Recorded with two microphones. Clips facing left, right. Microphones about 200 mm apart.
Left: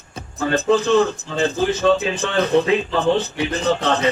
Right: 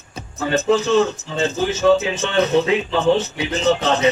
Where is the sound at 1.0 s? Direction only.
25° right (ahead or behind).